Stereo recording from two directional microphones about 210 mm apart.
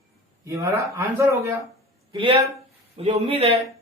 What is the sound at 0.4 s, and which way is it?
Speech, 15° right (ahead or behind).